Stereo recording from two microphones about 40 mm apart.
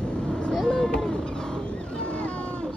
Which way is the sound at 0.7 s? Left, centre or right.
Left.